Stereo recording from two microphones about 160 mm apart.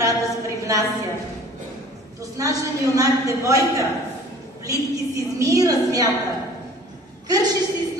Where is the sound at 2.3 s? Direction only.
20° right (ahead or behind).